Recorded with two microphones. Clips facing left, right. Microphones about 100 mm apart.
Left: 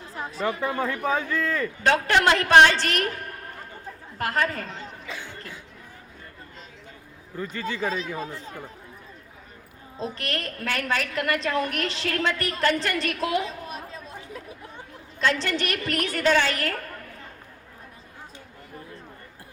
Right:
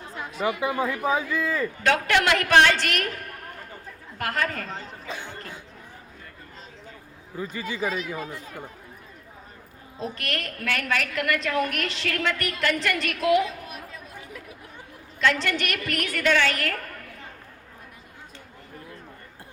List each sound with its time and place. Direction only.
0.1 s chatter: 35° left (ahead or behind)
1.0 s speech: 10° right (ahead or behind)
1.8 s a woman's voice: 35° left (ahead or behind)
4.7 s chatter: 40° right (ahead or behind)
5.3 s cough: 35° right (ahead or behind)
7.5 s speech: 10° right (ahead or behind)
7.9 s speech: 30° left (ahead or behind)
10.0 s a woman's voice: 30° left (ahead or behind)